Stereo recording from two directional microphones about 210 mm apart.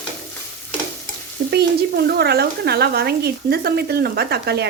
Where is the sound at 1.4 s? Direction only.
50° right (ahead or behind).